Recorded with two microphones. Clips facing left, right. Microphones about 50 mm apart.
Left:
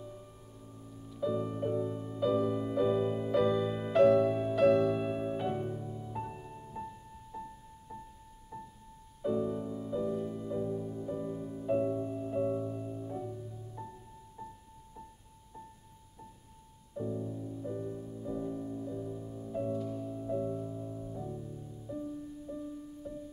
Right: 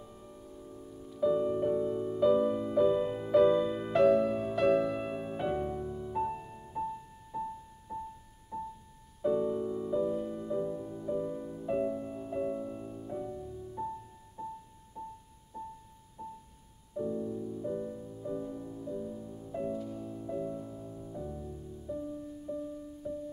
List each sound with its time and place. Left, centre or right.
0.0 s music: centre
5.4 s music: centre
5.7 s music: right
6.1 s music: centre
8.5 s music: centre
9.2 s music: centre
16.2 s music: centre
19.5 s music: centre